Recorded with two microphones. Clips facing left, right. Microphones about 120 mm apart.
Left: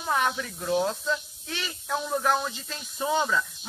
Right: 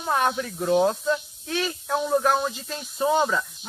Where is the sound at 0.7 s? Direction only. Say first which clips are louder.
Right 5 dB; 10° right (ahead or behind).